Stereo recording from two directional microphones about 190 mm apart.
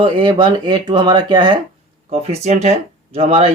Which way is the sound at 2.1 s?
35° right (ahead or behind).